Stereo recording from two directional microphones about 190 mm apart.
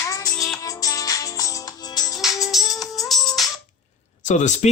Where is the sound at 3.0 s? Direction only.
Centre (ahead or behind).